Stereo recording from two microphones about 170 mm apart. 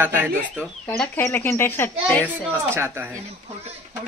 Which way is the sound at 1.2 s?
15° left (ahead or behind).